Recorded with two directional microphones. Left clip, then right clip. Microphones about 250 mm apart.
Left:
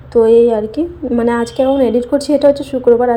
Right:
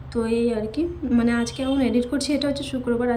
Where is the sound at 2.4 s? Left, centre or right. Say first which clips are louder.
Left 14 dB; centre.